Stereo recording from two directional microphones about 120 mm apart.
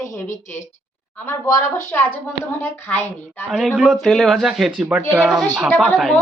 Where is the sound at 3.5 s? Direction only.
Centre (ahead or behind).